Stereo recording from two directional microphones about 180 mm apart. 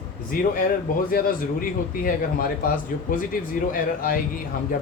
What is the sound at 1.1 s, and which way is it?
Speech, 50° left (ahead or behind).